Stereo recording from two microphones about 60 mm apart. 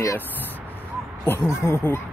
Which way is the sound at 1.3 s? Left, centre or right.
Left.